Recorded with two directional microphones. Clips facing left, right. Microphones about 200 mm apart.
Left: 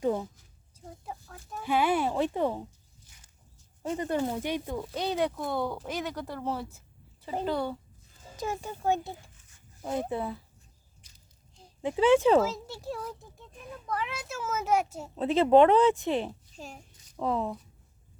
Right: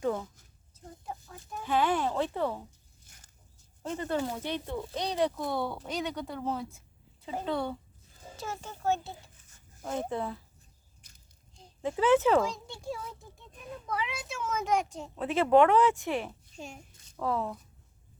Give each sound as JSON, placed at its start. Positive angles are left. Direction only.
{"t": 0.0, "sound": "a sound", "side_deg": 20}
{"t": 1.0, "sound": "chicken", "side_deg": 0}
{"t": 1.6, "sound": "a sound", "side_deg": 10}
{"t": 3.8, "sound": "speech", "side_deg": 15}
{"t": 8.4, "sound": "speech", "side_deg": 15}
{"t": 11.8, "sound": "speech", "side_deg": 20}
{"t": 12.4, "sound": "speech", "side_deg": 5}
{"t": 15.1, "sound": "speech", "side_deg": 25}
{"t": 16.6, "sound": "speech", "side_deg": 0}
{"t": 17.2, "sound": "speech", "side_deg": 20}